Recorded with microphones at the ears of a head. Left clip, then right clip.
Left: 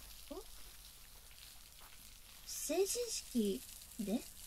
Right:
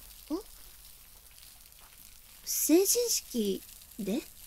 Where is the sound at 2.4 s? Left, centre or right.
Right.